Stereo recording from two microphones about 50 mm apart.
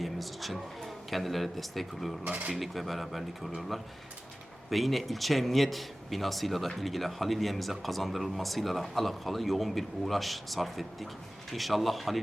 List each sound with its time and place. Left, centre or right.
0.0 s speech: centre
2.2 s speech: right
2.5 s speech: centre
4.7 s speech: centre